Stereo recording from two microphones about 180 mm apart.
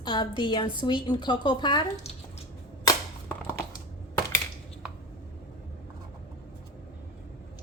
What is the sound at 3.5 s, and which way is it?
Crushing, 15° left (ahead or behind).